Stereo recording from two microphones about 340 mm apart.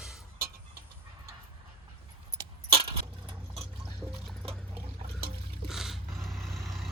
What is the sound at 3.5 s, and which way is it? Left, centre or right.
Music, centre.